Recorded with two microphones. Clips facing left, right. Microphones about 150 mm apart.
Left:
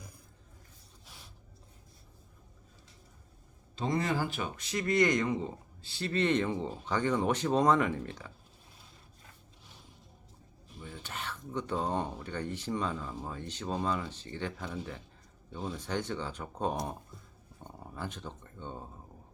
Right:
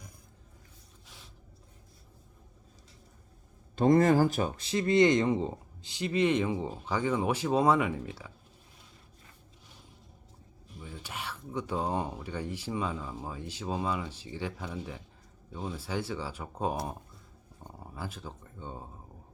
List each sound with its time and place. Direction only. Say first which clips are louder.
3.8 s speech: right 9 dB; 50° right (ahead or behind); by 5.5 s 25° right (ahead or behind)
5.8 s speech: right 3 dB; 15° right (ahead or behind)
10.8 s speech: right 1 dB; 10° right (ahead or behind)